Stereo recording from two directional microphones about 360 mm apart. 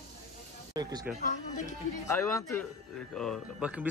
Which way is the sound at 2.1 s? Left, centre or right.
Centre.